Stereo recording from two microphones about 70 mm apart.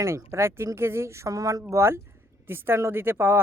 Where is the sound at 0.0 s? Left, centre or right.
Right.